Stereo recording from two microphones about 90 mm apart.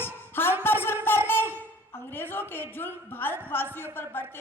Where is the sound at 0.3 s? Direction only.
25° left (ahead or behind).